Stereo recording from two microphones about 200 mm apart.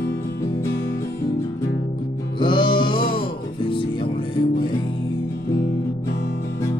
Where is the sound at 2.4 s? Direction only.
25° left (ahead or behind).